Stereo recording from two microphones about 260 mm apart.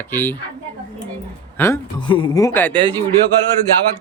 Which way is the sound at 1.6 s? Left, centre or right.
Centre.